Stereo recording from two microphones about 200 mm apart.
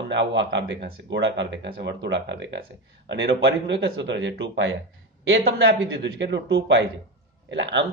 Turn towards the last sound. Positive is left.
turn(degrees=-65)  # may be behind; listen again after turning